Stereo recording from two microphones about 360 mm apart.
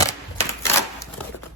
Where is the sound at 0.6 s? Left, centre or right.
Centre.